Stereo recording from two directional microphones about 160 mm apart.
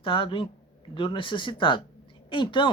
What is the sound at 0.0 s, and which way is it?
Speech, 30° left (ahead or behind).